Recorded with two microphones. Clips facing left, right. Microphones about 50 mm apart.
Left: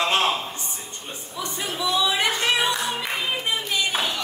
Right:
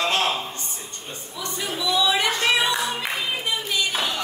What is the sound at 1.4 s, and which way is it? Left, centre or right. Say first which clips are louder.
Speech: even; left.